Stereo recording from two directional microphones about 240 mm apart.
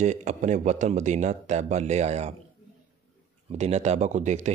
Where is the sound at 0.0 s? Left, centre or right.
Right.